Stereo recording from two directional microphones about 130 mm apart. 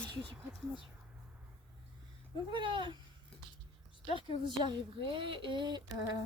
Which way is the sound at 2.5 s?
35° right (ahead or behind).